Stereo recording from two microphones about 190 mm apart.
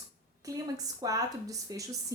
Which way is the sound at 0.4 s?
15° right (ahead or behind).